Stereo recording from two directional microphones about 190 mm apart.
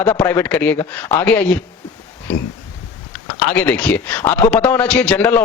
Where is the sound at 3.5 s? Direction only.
10° left (ahead or behind).